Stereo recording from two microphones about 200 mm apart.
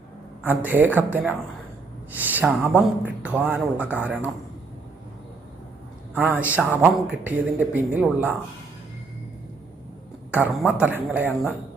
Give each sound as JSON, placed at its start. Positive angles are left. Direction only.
{"t": 0.4, "sound": "speech", "side_deg": -10}
{"t": 6.1, "sound": "speech", "side_deg": -10}
{"t": 10.3, "sound": "speech", "side_deg": -5}